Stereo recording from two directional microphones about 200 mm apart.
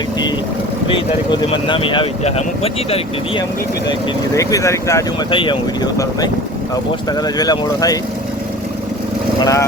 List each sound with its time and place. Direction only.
0.9 s speech: 25° left (ahead or behind)
4.4 s speech: 15° left (ahead or behind)
5.3 s speech: 25° left (ahead or behind)
7.3 s speech: 20° left (ahead or behind)
9.4 s speech: 15° left (ahead or behind)